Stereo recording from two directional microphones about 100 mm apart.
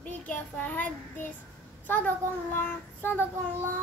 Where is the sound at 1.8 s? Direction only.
20° left (ahead or behind).